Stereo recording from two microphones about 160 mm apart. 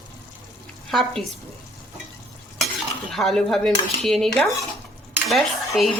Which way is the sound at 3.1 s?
Centre (ahead or behind).